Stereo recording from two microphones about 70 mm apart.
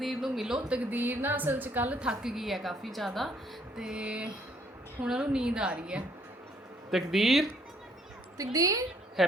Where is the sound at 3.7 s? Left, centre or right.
Centre.